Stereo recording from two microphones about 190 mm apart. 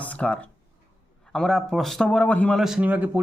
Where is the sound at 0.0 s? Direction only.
5° left (ahead or behind).